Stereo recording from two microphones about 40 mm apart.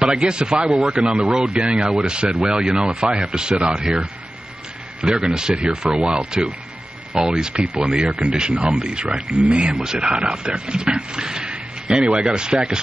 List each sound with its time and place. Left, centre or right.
0.0 s speech: right
5.0 s speech: centre
7.2 s speech: centre
11.5 s a sound: right
12.4 s speech: right